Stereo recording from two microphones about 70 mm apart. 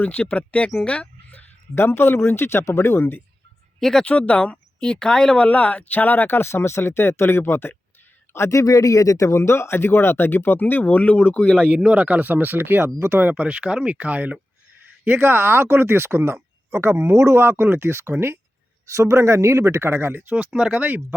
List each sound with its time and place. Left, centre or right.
0.0 s speech: left
0.9 s a sound: left
1.7 s speech: left
3.8 s speech: centre
4.0 s speech: left
8.3 s speech: left; by 11.7 s centre
11.7 s speech: centre
15.0 s speech: right
20.3 s speech: centre